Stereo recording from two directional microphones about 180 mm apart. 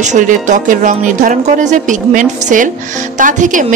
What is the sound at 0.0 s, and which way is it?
A woman's voice, 40° right (ahead or behind).